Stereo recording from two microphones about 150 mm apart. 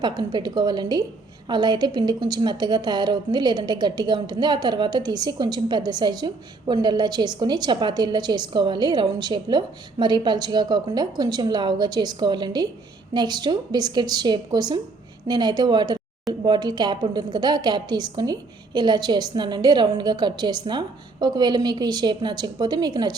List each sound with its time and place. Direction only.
0.0 s a woman's voice: 30° right (ahead or behind)